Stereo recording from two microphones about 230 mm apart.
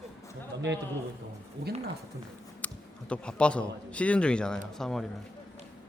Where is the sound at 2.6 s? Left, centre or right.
Centre.